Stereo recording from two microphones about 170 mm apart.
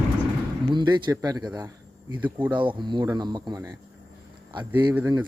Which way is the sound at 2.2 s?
10° right (ahead or behind).